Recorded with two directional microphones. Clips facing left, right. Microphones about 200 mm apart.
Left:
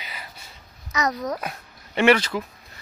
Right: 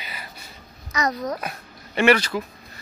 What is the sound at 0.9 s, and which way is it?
Babbling, centre (ahead or behind).